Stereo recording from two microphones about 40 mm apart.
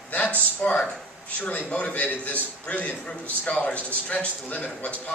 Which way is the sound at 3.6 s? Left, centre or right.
Left.